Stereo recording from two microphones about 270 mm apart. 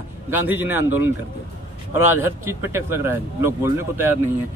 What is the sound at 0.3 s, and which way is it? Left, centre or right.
Speech, centre.